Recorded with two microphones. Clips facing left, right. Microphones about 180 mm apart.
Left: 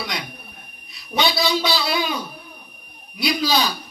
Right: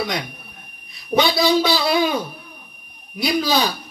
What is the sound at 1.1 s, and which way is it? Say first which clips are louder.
Music: right 5 dB; 50° right (ahead or behind).